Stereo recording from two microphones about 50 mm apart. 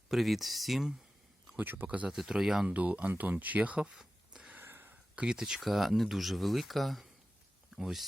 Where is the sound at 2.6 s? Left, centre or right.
Right.